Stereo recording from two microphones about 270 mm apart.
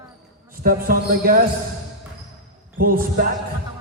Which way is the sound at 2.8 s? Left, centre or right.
Right.